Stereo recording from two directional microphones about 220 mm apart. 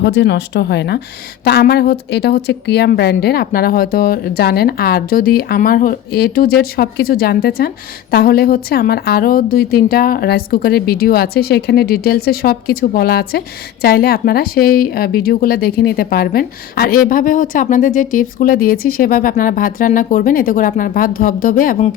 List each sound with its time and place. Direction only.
0.0 s a woman's voice: 55° left (ahead or behind); by 21.8 s 40° left (ahead or behind)